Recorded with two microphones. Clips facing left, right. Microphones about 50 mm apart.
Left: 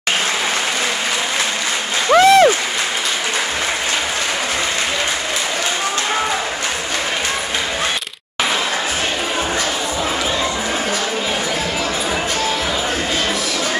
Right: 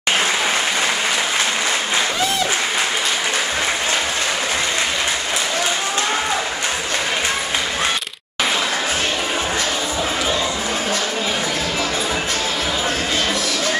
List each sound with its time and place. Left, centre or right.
2.1 s applause: left